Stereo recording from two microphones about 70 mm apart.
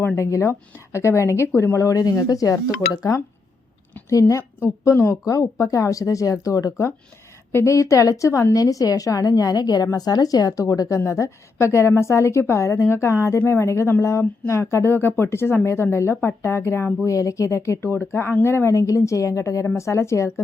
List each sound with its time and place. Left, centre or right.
0.2 s speech: left
1.8 s speech: left
4.6 s speech: left
8.5 s speech: left
17.1 s speech: left
18.7 s speech: left